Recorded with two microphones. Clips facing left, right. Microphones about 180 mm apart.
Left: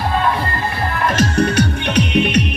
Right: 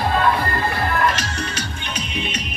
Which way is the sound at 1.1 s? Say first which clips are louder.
Left 10 dB; 55° left (ahead or behind).